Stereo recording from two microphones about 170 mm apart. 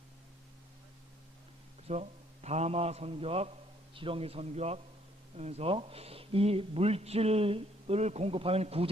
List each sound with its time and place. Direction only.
1.9 s speech: 40° right (ahead or behind)